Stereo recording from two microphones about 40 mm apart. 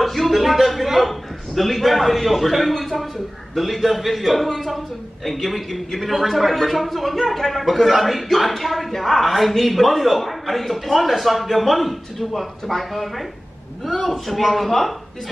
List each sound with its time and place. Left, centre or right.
0.0 s a man's voice: centre